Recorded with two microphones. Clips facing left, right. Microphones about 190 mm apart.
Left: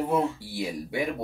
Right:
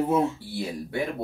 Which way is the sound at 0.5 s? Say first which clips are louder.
Even; 10° left (ahead or behind).